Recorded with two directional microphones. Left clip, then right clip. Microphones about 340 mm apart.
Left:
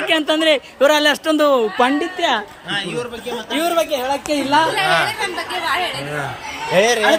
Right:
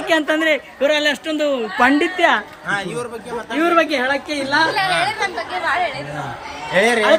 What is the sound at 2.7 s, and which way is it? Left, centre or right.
Speech, centre.